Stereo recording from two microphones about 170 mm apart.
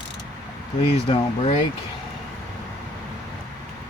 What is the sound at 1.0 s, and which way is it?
Speech, 30° left (ahead or behind).